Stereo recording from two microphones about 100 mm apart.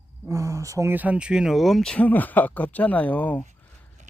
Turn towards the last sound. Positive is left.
turn(degrees=15)  # may be behind; listen again after turning